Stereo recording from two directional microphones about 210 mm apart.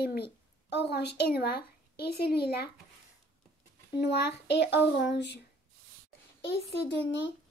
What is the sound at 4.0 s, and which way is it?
A child's voice, 55° left (ahead or behind).